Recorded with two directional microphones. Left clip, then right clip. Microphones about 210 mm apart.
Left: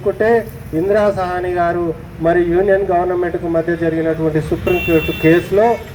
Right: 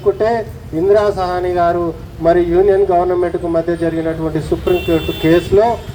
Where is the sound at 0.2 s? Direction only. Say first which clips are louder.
Left 2 dB; 40° left (ahead or behind).